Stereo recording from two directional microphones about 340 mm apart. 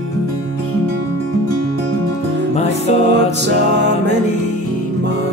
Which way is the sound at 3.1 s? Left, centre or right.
Right.